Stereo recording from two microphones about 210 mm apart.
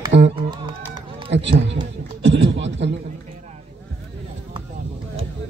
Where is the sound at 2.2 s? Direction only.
60° right (ahead or behind).